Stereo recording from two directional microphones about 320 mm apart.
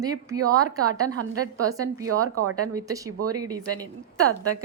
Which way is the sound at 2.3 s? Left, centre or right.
Right.